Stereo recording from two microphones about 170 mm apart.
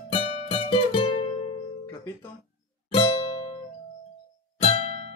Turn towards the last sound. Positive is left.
turn(degrees=40)  # may be behind; listen again after turning